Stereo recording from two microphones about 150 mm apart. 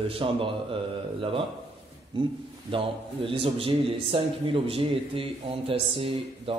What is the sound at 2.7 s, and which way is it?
Speech, 35° right (ahead or behind).